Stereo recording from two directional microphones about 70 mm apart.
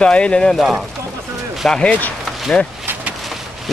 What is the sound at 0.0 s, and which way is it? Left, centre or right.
Speech, centre.